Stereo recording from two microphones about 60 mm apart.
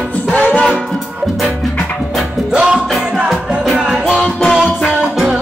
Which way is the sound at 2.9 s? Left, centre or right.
Centre.